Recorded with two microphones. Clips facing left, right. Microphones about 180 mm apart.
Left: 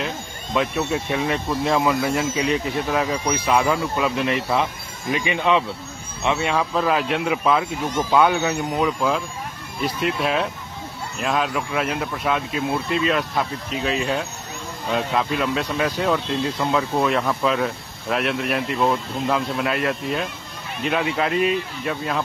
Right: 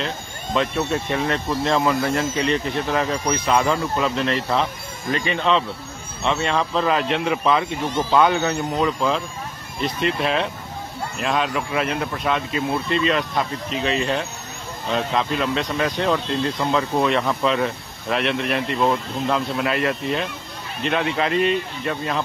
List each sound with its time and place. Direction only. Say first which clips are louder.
0.6 s speech: even; 5° left (ahead or behind)